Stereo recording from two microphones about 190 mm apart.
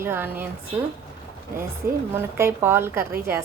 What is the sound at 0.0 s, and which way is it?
Speech, 10° right (ahead or behind).